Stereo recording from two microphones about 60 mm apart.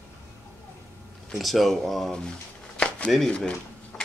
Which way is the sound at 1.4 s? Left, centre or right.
Centre.